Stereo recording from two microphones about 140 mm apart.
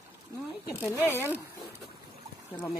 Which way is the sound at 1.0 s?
20° left (ahead or behind).